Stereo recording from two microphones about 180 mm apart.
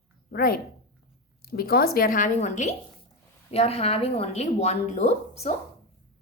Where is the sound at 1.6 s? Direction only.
55° left (ahead or behind); by 5.5 s 35° left (ahead or behind).